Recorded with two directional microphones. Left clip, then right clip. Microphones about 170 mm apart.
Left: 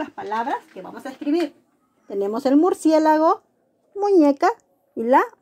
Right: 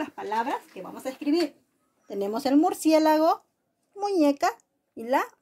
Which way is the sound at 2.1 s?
30° left (ahead or behind).